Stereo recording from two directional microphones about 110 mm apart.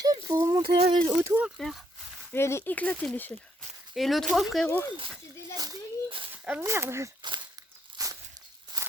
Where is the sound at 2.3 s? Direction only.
25° left (ahead or behind).